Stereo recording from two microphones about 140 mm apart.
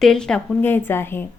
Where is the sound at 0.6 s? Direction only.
15° left (ahead or behind).